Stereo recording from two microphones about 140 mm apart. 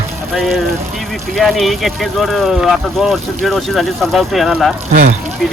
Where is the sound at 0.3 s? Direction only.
Centre (ahead or behind).